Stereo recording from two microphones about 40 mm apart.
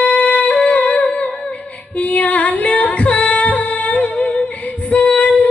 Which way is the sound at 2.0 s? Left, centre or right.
Left.